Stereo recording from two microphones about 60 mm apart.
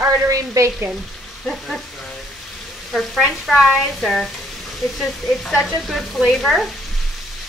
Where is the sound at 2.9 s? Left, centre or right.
Centre.